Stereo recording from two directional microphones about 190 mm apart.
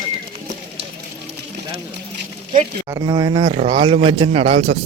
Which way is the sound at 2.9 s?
20° right (ahead or behind).